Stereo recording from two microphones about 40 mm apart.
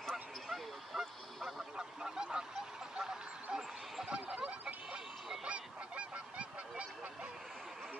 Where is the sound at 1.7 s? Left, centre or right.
Centre.